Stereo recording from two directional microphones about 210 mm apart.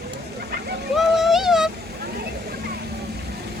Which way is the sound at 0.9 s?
Centre (ahead or behind).